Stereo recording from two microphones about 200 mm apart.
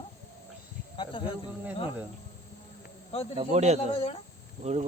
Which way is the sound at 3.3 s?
35° right (ahead or behind).